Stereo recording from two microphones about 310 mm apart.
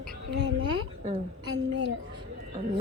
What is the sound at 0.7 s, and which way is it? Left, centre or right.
Speech, centre.